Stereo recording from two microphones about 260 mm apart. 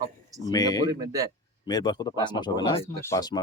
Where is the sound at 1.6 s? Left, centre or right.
Centre.